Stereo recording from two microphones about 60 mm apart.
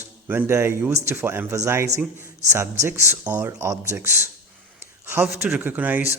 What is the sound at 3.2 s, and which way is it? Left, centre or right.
Speech, right.